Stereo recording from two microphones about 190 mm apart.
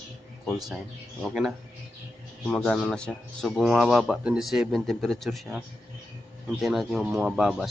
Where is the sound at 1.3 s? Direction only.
5° right (ahead or behind).